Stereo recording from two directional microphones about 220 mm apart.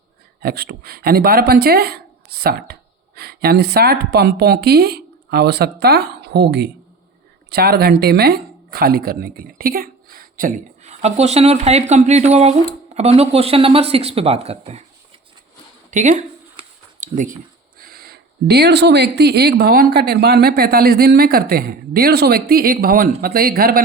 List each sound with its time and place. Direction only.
0.4 s speech: 45° right (ahead or behind); by 14.8 s 30° right (ahead or behind)
15.9 s a sound: 35° right (ahead or behind)
17.7 s speech: 45° right (ahead or behind)